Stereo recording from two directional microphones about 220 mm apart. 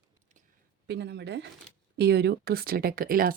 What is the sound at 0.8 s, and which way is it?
A woman's voice, 50° right (ahead or behind).